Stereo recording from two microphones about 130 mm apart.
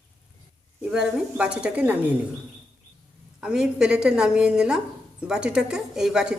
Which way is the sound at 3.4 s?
5° right (ahead or behind).